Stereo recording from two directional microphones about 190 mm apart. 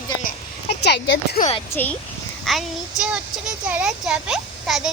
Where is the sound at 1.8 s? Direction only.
10° left (ahead or behind).